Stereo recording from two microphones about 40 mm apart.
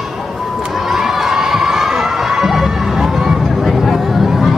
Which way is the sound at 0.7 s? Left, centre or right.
Centre.